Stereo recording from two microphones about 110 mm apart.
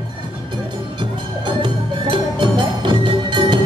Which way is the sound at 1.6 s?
45° right (ahead or behind).